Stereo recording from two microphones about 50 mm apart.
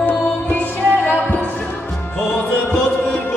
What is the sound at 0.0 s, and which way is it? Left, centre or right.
Music, left.